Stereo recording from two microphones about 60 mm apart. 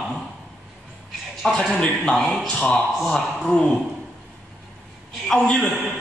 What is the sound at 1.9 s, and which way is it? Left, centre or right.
Speech, centre.